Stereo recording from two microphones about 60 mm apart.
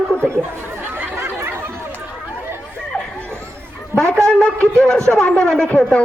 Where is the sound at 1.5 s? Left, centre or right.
Right.